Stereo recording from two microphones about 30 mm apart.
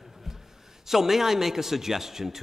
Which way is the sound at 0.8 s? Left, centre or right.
Centre.